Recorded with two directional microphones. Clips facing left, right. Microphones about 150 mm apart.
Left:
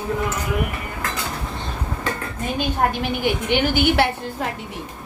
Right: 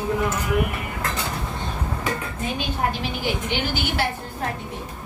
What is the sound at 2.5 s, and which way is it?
A woman's voice, 55° left (ahead or behind).